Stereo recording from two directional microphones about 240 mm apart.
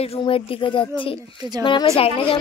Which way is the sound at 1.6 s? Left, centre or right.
Centre.